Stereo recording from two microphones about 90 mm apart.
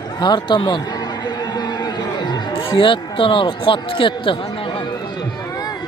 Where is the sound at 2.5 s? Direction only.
70° left (ahead or behind).